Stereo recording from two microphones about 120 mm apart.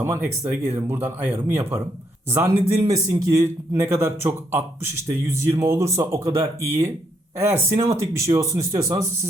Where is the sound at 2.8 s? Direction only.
30° right (ahead or behind).